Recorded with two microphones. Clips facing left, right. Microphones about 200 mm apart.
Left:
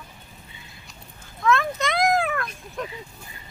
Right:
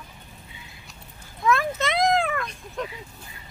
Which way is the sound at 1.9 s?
Centre (ahead or behind).